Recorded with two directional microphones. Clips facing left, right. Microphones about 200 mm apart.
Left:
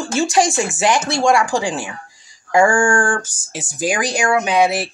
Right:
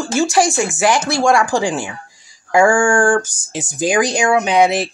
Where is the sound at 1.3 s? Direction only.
15° right (ahead or behind).